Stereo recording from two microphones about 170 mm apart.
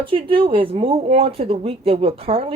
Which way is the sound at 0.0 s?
30° right (ahead or behind).